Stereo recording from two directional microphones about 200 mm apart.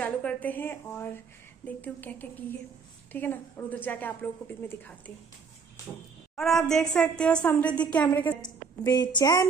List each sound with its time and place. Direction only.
0.0 s a woman's voice: 5° left (ahead or behind)
6.3 s a woman's voice: centre (ahead or behind)
8.4 s a woman's voice: 20° left (ahead or behind)